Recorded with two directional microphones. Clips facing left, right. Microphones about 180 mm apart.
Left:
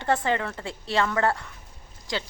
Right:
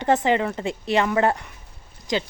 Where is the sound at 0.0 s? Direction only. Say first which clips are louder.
Right 5 dB; 20° right (ahead or behind).